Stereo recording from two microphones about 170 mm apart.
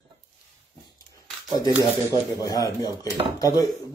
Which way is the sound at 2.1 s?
20° left (ahead or behind).